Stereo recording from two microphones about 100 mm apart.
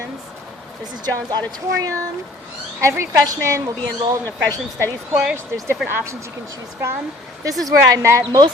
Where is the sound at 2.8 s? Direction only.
25° right (ahead or behind).